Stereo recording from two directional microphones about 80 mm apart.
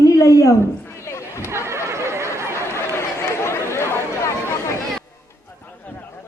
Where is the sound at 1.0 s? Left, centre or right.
Left.